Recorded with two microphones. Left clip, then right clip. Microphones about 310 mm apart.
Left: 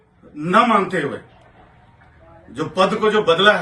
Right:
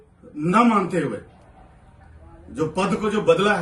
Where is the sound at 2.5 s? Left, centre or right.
Centre.